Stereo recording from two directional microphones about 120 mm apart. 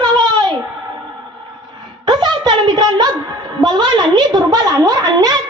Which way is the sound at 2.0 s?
35° right (ahead or behind).